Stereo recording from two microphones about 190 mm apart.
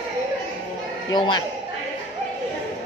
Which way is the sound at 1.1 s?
25° left (ahead or behind).